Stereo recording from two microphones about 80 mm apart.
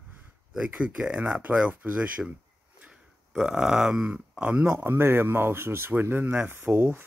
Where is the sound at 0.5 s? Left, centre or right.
Centre.